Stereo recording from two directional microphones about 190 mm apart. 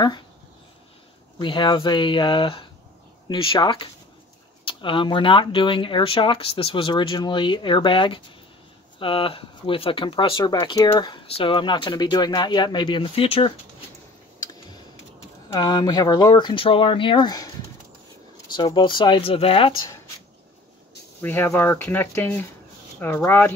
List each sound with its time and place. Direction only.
1.4 s speech: 25° left (ahead or behind)
15.5 s speech: 20° left (ahead or behind)
18.5 s speech: 25° left (ahead or behind)
21.2 s speech: 10° left (ahead or behind)